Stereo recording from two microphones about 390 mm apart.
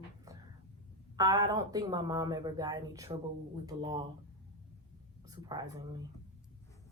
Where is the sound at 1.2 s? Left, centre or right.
Centre.